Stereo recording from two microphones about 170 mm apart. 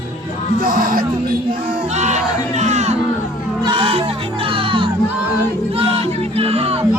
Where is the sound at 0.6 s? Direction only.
55° right (ahead or behind).